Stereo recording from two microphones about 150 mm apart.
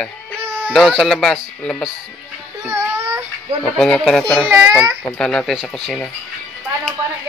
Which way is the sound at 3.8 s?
5° left (ahead or behind).